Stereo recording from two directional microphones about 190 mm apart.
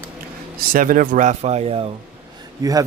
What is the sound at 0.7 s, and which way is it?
Speech, 45° right (ahead or behind).